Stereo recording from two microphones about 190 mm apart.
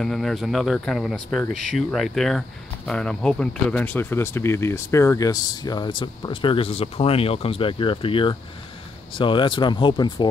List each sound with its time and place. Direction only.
0.0 s speech: centre (ahead or behind); by 10.3 s 25° left (ahead or behind)